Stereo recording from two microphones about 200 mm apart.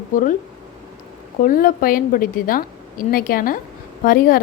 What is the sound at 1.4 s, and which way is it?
A woman's voice, 45° left (ahead or behind).